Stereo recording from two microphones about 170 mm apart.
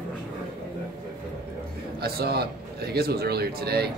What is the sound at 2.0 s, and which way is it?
Speech, 70° right (ahead or behind).